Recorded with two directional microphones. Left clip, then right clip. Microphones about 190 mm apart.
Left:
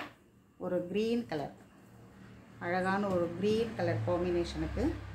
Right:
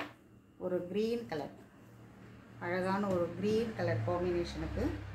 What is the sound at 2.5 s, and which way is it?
A woman's voice, 45° left (ahead or behind).